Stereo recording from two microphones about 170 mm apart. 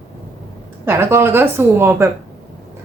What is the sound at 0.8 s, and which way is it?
A woman's voice, 15° right (ahead or behind).